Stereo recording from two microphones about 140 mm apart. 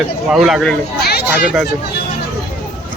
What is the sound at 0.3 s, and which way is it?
Speech, centre (ahead or behind).